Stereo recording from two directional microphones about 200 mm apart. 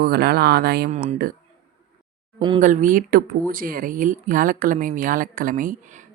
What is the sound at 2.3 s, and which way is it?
Speech, 25° right (ahead or behind).